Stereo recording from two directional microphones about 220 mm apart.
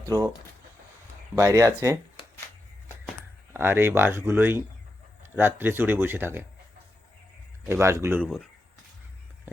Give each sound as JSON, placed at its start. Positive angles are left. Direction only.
{"t": 0.0, "sound": "speech", "side_deg": -15}
{"t": 1.4, "sound": "speech", "side_deg": -15}
{"t": 3.5, "sound": "speech", "side_deg": -10}
{"t": 7.7, "sound": "speech", "side_deg": -10}
{"t": 8.2, "sound": "speech", "side_deg": 0}